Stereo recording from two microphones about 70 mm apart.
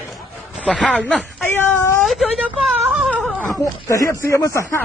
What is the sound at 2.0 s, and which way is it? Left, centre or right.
Speech, centre.